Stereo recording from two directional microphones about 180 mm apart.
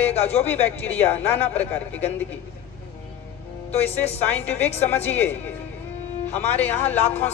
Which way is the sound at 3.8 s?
35° left (ahead or behind).